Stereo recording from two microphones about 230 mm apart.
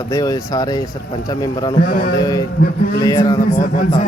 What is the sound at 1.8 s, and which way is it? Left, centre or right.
Speech, left.